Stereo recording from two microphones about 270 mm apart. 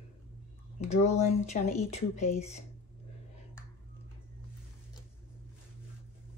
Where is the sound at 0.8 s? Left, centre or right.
Left.